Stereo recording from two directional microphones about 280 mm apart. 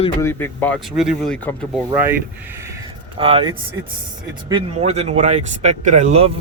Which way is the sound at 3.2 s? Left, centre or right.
Centre.